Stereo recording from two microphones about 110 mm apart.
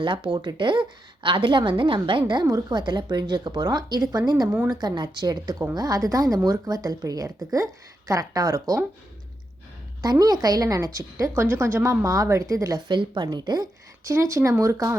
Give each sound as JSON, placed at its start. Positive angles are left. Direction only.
{"t": 0.0, "sound": "a woman's voice", "side_deg": -50}
{"t": 10.0, "sound": "a woman's voice", "side_deg": -35}
{"t": 12.9, "sound": "a woman's voice", "side_deg": -45}
{"t": 14.0, "sound": "speech", "side_deg": -25}